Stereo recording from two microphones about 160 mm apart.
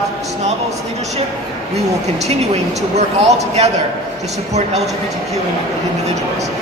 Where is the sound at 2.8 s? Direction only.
45° right (ahead or behind).